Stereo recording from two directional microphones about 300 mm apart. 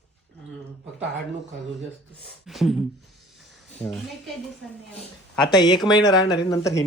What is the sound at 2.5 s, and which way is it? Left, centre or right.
Speech, centre.